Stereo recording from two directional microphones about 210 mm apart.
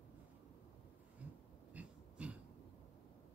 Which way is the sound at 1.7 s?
5° right (ahead or behind).